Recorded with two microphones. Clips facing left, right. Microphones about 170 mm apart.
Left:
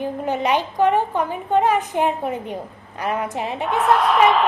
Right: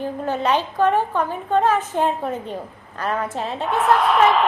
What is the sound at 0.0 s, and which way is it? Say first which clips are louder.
A woman's voice: even; 15° left (ahead or behind).